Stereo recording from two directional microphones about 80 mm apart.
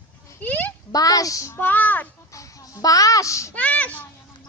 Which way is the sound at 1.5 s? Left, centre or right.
Left.